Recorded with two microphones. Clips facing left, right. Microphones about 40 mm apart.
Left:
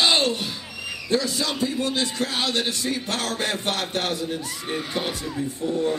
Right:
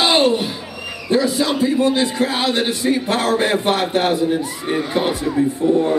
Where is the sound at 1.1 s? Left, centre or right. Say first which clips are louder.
Right 7 dB; centre; by 5.7 s right.